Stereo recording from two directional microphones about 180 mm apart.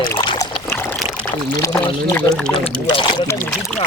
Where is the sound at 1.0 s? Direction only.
Centre (ahead or behind).